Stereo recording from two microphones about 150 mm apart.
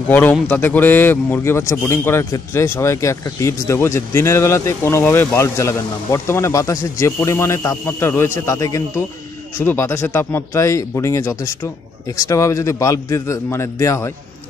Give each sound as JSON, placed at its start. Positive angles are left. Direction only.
{"t": 0.1, "sound": "a man's voice", "side_deg": 10}